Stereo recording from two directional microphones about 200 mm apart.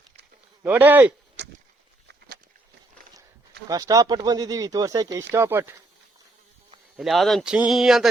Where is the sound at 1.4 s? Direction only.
60° right (ahead or behind).